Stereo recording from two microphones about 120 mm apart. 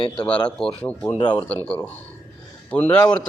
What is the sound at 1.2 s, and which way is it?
Speech, 40° left (ahead or behind).